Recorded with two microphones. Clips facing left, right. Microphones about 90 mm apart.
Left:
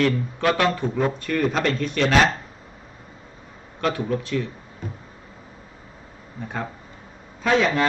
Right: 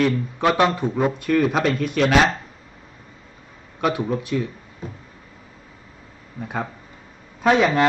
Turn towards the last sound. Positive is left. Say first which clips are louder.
# right 3 dB
turn(degrees=-15)  # may be behind; listen again after turning